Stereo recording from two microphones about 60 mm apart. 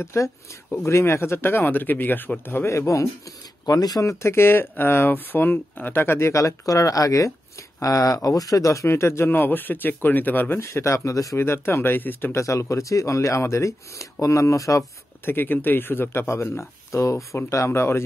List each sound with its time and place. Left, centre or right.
0.0 s speech: left
3.6 s speech: left
7.8 s speech: left
8.8 s speech: left
9.3 s speech: left
10.6 s speech: left
11.3 s speech: left
12.3 s speech: left
15.2 s speech: left